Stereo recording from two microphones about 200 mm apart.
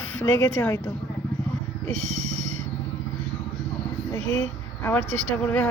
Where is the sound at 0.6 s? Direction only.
15° left (ahead or behind).